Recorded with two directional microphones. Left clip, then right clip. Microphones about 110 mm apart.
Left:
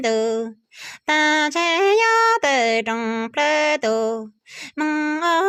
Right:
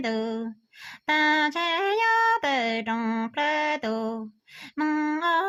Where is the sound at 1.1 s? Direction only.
35° left (ahead or behind).